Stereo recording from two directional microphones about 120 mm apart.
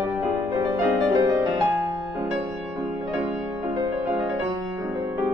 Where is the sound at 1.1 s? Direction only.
35° right (ahead or behind).